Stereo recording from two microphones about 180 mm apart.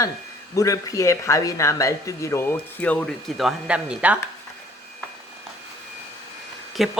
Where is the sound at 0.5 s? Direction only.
20° left (ahead or behind); by 4.2 s 5° right (ahead or behind).